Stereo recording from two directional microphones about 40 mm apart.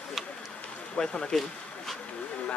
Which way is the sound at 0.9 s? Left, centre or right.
Centre.